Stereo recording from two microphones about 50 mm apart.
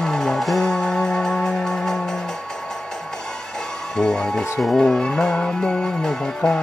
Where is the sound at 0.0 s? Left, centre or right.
Centre.